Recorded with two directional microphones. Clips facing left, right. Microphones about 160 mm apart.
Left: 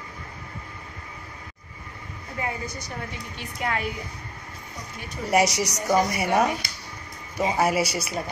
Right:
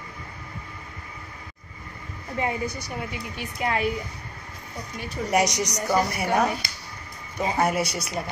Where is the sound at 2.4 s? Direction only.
25° right (ahead or behind).